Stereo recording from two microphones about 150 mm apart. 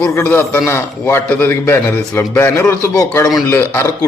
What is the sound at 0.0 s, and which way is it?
A man's voice, 15° left (ahead or behind).